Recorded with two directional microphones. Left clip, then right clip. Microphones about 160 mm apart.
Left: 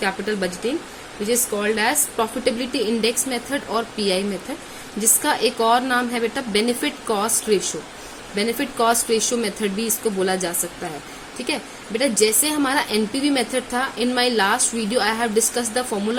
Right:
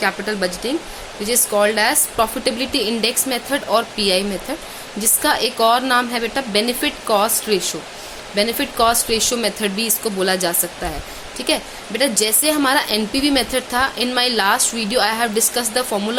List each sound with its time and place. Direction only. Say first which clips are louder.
0.0 s a woman's voice: right 3 dB; 15° right (ahead or behind)